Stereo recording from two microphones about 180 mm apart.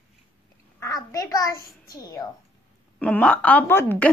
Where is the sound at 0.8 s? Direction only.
20° left (ahead or behind).